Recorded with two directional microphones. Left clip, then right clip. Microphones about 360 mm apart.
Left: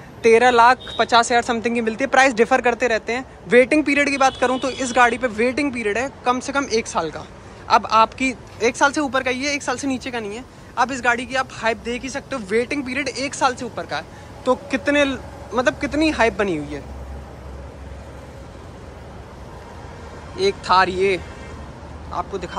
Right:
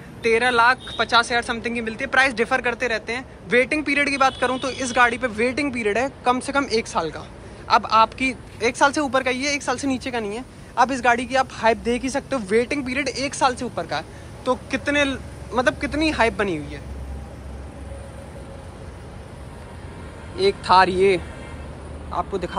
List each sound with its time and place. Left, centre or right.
0.4 s speech: centre
20.3 s speech: centre